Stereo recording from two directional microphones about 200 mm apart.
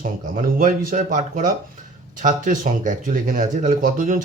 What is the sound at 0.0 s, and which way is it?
Speech, 40° right (ahead or behind).